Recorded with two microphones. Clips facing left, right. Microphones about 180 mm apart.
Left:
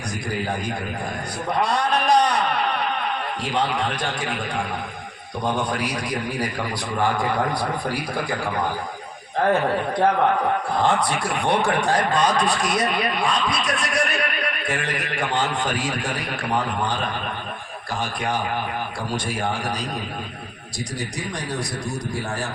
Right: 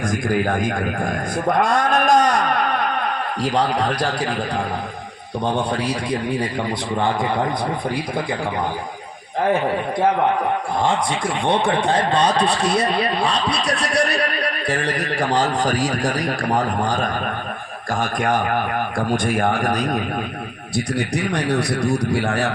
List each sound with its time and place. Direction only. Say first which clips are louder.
0.1 s a man's voice: right 5 dB; 50° right (ahead or behind); by 6.5 s 30° right (ahead or behind)
7.9 s a man's voice: right 3 dB; 20° right (ahead or behind)
9.4 s a man's voice: right 1 dB; 10° right (ahead or behind); by 20.0 s 50° right (ahead or behind)
20.7 s a man's voice: right 8 dB; 65° right (ahead or behind)